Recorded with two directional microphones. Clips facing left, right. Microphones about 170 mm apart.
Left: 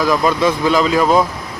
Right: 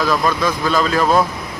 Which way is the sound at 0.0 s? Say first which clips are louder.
Left 3 dB; 15° left (ahead or behind).